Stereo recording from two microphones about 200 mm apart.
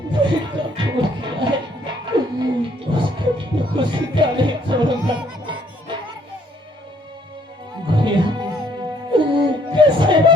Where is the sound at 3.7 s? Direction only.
25° right (ahead or behind).